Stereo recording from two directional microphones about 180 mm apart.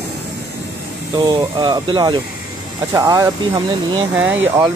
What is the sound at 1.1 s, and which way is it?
Speech, 25° right (ahead or behind).